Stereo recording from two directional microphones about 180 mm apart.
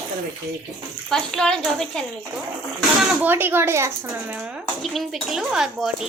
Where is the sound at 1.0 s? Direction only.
Centre (ahead or behind).